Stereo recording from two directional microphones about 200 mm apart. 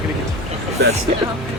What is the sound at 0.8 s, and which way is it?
Speech, 60° right (ahead or behind).